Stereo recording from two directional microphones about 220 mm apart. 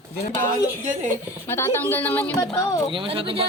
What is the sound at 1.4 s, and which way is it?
Speech, 10° left (ahead or behind).